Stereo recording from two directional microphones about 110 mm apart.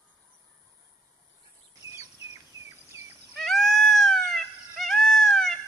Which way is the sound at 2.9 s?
25° right (ahead or behind).